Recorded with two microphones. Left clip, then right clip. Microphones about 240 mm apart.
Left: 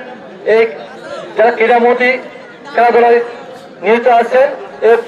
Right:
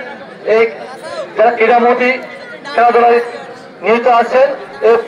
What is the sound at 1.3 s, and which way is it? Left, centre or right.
A man's voice, left.